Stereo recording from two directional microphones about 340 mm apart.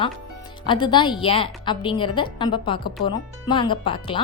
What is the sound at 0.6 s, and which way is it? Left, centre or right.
A woman's voice, centre.